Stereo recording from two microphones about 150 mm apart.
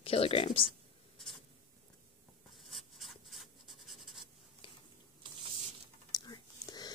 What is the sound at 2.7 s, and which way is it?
Writing, centre (ahead or behind).